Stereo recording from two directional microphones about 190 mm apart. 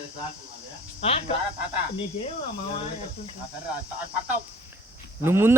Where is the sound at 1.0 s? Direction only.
30° left (ahead or behind).